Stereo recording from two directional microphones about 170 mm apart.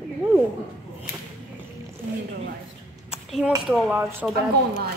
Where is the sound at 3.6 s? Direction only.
5° right (ahead or behind).